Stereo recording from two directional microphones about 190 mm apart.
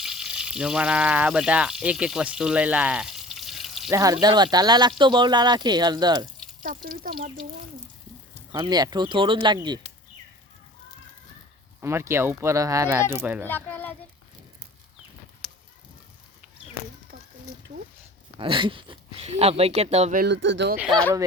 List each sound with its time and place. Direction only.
0.0 s speech: 5° right (ahead or behind)
3.9 s speech: 20° right (ahead or behind)
6.8 s speech: 50° right (ahead or behind)
8.5 s speech: 20° right (ahead or behind)
11.8 s speech: 15° right (ahead or behind)
13.5 s a child's voice: 10° left (ahead or behind)
18.3 s speech: 25° right (ahead or behind)
20.1 s speech: 65° right (ahead or behind)
20.7 s speech: centre (ahead or behind)